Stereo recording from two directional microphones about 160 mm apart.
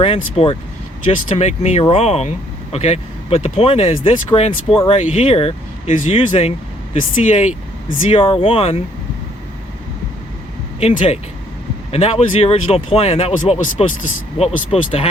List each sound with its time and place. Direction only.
0.0 s speech: 35° left (ahead or behind)
10.8 s speech: 40° left (ahead or behind)